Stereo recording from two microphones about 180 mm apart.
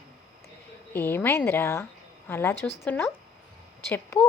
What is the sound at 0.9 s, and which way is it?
A woman's voice, 10° left (ahead or behind).